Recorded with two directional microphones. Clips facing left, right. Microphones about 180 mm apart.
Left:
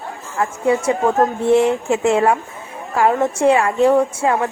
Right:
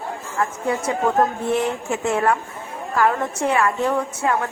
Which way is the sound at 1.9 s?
75° left (ahead or behind).